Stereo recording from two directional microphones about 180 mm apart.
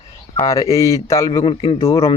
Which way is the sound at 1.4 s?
30° left (ahead or behind).